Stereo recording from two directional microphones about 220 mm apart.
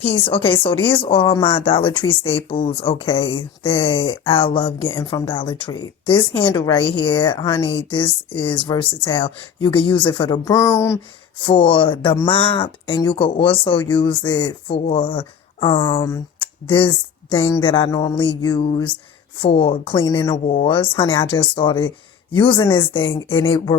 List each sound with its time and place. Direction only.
0.9 s a woman's voice: 25° left (ahead or behind)
20.5 s a woman's voice: 30° left (ahead or behind)